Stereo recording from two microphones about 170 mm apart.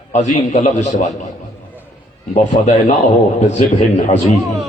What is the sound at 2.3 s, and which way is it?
Speech, 45° left (ahead or behind).